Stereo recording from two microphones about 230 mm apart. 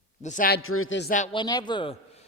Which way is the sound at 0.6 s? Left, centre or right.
Left.